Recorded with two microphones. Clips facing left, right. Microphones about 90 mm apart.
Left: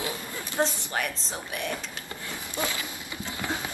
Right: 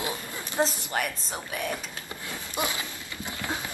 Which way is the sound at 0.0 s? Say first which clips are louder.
Even; 20° right (ahead or behind).